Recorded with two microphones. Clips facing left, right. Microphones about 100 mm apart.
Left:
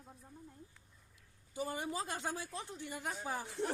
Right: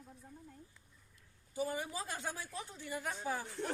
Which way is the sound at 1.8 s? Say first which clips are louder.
Left 2 dB; 20° left (ahead or behind).